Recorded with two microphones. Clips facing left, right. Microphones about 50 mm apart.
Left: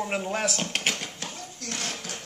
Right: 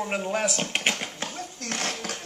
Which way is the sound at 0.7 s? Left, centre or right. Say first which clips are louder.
Right 2 dB; centre.